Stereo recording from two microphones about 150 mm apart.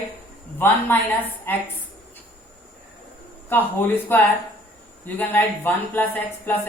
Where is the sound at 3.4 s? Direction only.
15° left (ahead or behind).